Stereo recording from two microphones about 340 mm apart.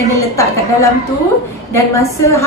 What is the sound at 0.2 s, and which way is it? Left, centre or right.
Speech, centre.